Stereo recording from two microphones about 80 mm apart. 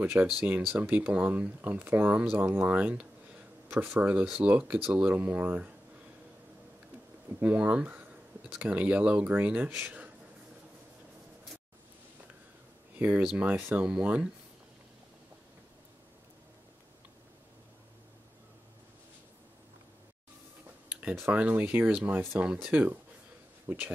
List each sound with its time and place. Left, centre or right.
0.0 s speech: right
7.3 s speech: centre
9.8 s a sound: centre
12.9 s speech: right
13.8 s speech: centre
21.3 s speech: centre
22.4 s speech: centre